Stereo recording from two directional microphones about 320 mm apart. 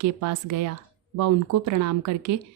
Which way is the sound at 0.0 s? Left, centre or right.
Right.